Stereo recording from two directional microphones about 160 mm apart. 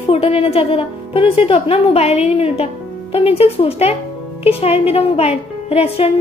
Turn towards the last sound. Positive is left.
turn(degrees=40)  # may be behind; listen again after turning